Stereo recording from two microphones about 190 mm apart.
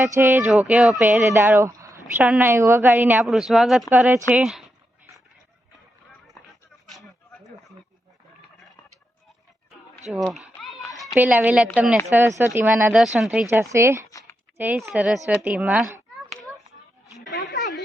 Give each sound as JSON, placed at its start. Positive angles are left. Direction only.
{"t": 0.0, "sound": "a woman's voice", "side_deg": -15}
{"t": 10.1, "sound": "speech", "side_deg": 0}
{"t": 10.4, "sound": "a sound", "side_deg": -5}
{"t": 10.9, "sound": "a woman's voice", "side_deg": -5}
{"t": 13.5, "sound": "a woman's voice", "side_deg": -15}
{"t": 14.1, "sound": "a sound", "side_deg": 15}
{"t": 14.6, "sound": "a woman's voice", "side_deg": -10}